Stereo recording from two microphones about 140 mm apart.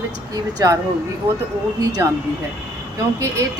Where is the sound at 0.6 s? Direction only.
25° right (ahead or behind).